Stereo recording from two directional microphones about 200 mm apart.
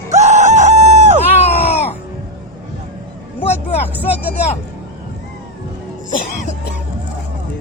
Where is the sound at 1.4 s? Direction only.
30° left (ahead or behind).